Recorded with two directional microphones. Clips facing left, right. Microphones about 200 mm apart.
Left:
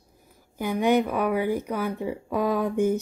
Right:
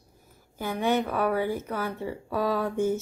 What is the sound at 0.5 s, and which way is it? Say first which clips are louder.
Speech: left 4 dB; 15° left (ahead or behind).